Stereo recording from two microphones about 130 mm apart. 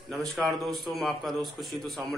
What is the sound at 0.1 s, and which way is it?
A man's voice, centre (ahead or behind).